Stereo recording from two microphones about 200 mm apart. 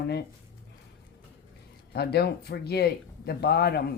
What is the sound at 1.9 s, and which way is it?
Speech, 55° left (ahead or behind).